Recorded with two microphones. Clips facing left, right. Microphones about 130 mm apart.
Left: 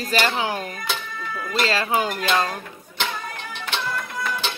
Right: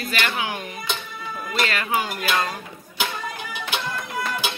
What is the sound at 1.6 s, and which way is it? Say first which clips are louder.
Speech: left 2 dB; 30° left (ahead or behind).